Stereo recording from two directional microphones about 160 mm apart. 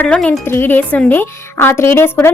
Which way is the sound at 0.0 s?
5° left (ahead or behind).